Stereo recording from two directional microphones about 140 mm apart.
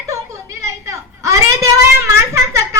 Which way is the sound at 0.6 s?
20° right (ahead or behind).